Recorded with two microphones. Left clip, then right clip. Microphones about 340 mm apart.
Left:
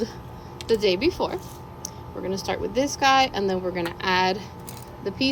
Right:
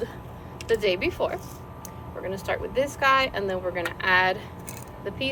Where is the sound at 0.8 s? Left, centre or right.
Centre.